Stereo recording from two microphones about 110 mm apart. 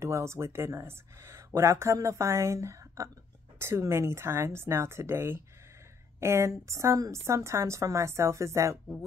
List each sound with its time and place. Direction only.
0.0 s speech: 25° right (ahead or behind)